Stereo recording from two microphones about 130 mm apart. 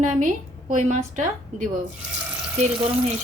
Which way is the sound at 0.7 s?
70° right (ahead or behind).